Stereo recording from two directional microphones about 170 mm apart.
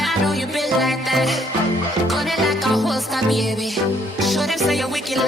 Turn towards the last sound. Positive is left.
turn(degrees=0)  # may be behind; listen again after turning